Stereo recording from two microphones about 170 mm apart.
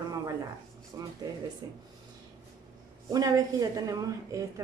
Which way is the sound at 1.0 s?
20° right (ahead or behind).